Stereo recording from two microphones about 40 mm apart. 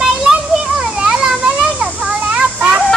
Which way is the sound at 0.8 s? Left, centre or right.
Centre.